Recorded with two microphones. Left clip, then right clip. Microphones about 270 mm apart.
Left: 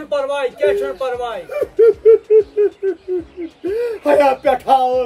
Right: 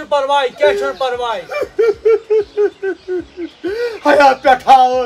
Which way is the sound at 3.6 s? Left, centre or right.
Right.